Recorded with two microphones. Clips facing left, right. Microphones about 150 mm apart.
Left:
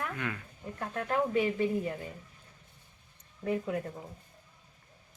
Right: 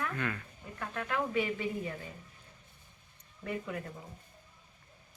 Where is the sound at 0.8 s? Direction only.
35° left (ahead or behind).